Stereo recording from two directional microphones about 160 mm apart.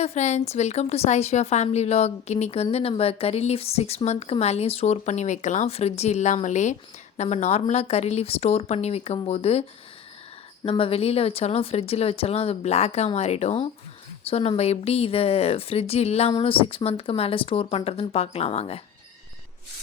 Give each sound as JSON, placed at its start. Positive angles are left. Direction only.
{"t": 0.0, "sound": "a woman's voice", "side_deg": 45}